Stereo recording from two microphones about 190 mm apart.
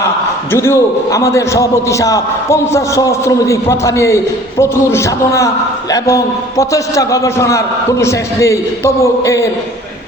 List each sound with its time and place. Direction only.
0.5 s a man's voice: 15° left (ahead or behind)